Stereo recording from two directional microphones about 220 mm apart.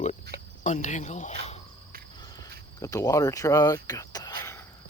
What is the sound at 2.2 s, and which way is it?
Cricket, 15° left (ahead or behind).